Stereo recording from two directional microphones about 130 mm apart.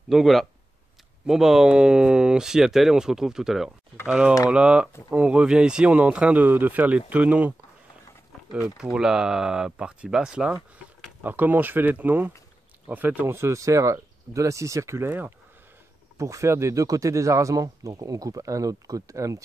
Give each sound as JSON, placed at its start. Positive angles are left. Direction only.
{"t": 0.1, "sound": "speech", "side_deg": 0}
{"t": 8.5, "sound": "speech", "side_deg": -5}